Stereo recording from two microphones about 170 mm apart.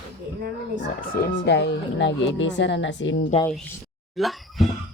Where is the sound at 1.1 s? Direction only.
85° left.